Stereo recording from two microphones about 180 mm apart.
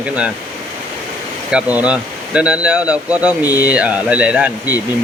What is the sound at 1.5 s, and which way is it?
Speech, 5° right (ahead or behind).